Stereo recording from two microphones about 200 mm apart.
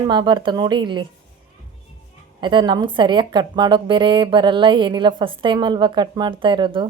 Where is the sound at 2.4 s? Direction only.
25° right (ahead or behind).